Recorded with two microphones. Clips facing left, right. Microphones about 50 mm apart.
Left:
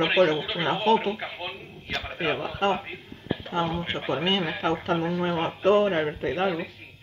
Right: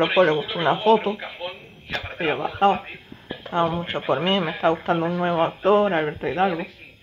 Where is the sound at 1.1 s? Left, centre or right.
Centre.